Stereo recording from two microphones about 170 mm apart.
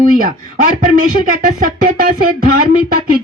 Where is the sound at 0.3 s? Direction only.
50° right (ahead or behind).